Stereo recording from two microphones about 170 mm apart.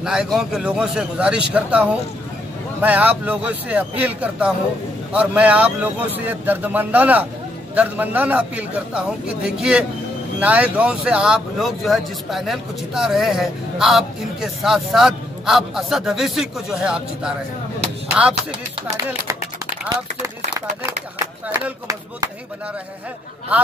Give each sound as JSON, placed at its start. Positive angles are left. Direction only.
{"t": 0.0, "sound": "a man's voice", "side_deg": -5}
{"t": 19.9, "sound": "speech", "side_deg": -20}